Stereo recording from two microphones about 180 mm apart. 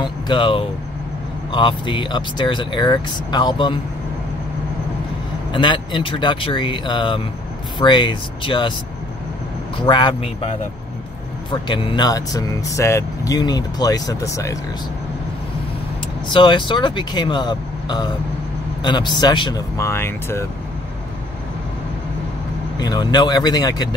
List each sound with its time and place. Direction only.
0.0 s speech: 25° left (ahead or behind)
5.5 s speech: 25° left (ahead or behind)
9.8 s speech: 25° left (ahead or behind)
16.3 s speech: 25° left (ahead or behind)
22.8 s speech: 20° left (ahead or behind)